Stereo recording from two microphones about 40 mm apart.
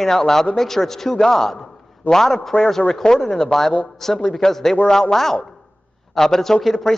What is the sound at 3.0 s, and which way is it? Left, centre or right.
Speech, left.